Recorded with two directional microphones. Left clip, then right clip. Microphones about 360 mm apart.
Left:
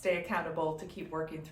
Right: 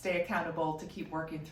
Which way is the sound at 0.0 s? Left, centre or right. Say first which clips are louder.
Left 1 dB; centre.